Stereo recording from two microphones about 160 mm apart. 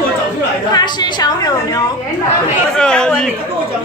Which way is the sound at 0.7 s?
25° left (ahead or behind).